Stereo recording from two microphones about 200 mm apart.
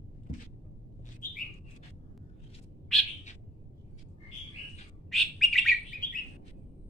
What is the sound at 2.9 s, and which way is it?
Bird, centre (ahead or behind).